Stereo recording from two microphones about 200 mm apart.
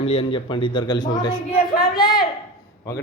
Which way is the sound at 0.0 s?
30° left (ahead or behind).